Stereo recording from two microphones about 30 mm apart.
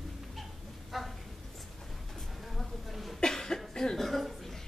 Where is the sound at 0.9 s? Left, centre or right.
Centre.